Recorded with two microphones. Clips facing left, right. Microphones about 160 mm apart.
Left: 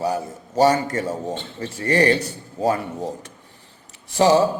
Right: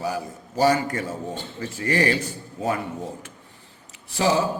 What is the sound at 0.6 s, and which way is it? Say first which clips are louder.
A man's voice: left 3 dB; 35° left (ahead or behind).